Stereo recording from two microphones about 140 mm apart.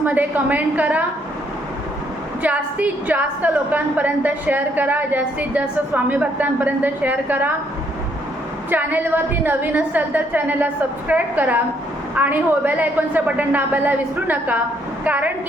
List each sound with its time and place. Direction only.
0.0 s a woman's voice: 10° right (ahead or behind)
2.4 s a woman's voice: 10° right (ahead or behind)
8.7 s a woman's voice: 15° right (ahead or behind)